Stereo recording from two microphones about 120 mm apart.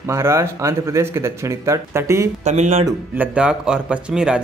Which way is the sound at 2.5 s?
70° right (ahead or behind).